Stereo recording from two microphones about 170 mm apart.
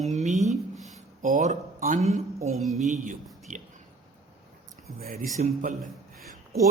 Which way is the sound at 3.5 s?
50° right (ahead or behind).